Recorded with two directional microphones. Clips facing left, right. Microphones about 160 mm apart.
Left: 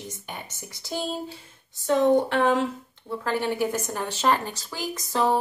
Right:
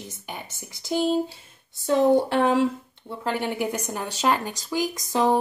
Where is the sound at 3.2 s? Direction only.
15° right (ahead or behind).